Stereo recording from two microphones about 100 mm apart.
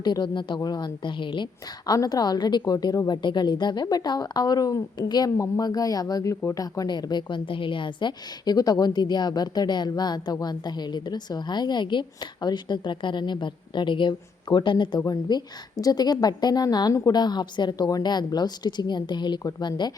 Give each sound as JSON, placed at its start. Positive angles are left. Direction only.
{"t": 0.0, "sound": "a woman's voice", "side_deg": 45}
{"t": 1.9, "sound": "speech", "side_deg": 40}
{"t": 3.2, "sound": "a woman's voice", "side_deg": 50}
{"t": 15.0, "sound": "a woman's voice", "side_deg": 40}